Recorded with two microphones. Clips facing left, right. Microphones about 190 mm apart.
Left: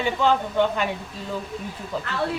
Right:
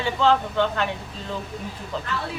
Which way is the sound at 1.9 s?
10° left (ahead or behind).